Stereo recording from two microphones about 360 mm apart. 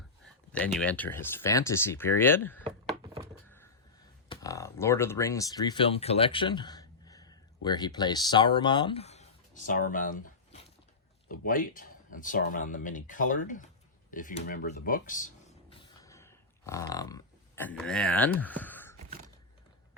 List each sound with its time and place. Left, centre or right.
0.5 s speech: centre
4.3 s speech: centre
15.7 s a sound: centre